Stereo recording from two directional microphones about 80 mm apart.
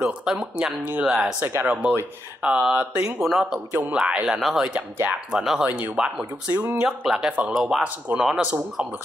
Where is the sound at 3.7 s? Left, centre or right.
Right.